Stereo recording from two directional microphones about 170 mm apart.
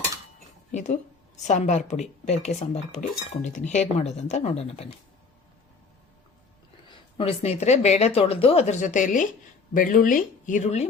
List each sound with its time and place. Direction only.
0.7 s a woman's voice: 45° left (ahead or behind)
6.8 s a woman's voice: 30° left (ahead or behind)